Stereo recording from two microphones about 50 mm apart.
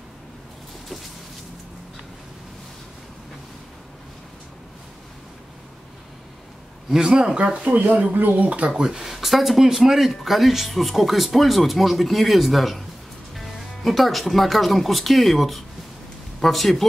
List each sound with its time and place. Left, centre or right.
6.9 s speech: centre
7.7 s speech: right; by 16.8 s centre